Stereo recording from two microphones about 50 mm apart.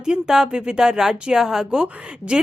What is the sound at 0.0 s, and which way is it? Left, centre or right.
A woman's voice, centre.